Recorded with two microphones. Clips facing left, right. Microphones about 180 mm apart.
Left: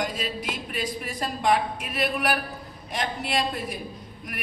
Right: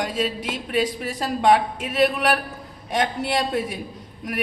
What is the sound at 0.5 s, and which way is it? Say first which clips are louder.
A woman's voice: right 7 dB; 85° right.